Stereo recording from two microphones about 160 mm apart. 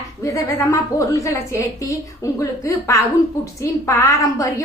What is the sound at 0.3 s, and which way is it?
A woman's voice, 20° left (ahead or behind).